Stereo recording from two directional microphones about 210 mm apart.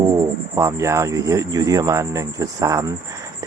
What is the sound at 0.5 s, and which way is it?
Speech, 15° right (ahead or behind).